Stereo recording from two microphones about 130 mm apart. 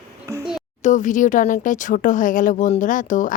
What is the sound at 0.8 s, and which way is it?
Speech, 70° left (ahead or behind).